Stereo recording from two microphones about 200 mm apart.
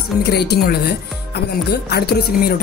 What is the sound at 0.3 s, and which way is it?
Speech, 55° left (ahead or behind).